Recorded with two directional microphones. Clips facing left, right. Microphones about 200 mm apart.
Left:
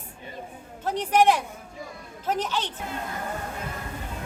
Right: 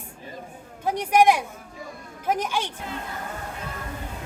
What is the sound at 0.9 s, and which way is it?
Speech, 10° right (ahead or behind).